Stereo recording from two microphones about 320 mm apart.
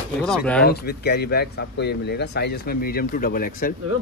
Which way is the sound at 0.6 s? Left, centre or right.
Left.